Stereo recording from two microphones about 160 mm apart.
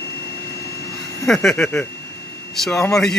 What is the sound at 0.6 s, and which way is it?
Vacuum cleaner, 20° left (ahead or behind).